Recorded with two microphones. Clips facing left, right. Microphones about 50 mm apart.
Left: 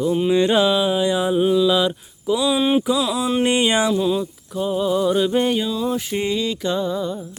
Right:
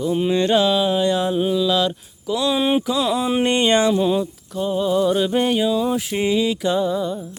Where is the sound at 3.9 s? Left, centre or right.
Centre.